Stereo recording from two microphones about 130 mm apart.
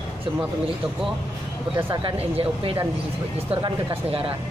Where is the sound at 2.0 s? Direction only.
40° right (ahead or behind).